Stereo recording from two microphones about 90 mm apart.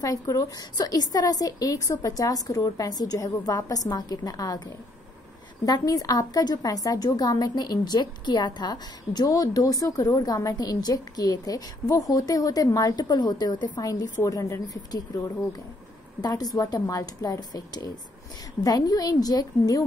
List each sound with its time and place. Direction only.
0.0 s a woman's voice: 40° left (ahead or behind)
5.7 s a woman's voice: 45° left (ahead or behind)
16.2 s a woman's voice: 45° left (ahead or behind)